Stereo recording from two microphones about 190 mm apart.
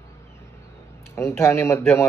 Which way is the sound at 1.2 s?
15° left (ahead or behind).